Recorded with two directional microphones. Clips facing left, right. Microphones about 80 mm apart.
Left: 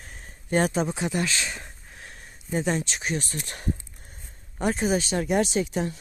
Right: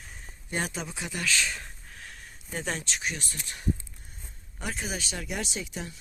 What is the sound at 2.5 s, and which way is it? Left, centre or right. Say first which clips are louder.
Speech: left 7 dB; centre.